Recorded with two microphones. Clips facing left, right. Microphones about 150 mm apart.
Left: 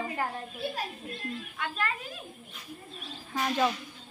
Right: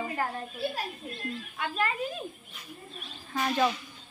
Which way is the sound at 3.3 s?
Centre (ahead or behind).